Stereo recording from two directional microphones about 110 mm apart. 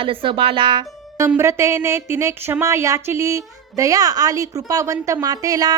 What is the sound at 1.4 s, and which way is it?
A woman's voice, 25° right (ahead or behind).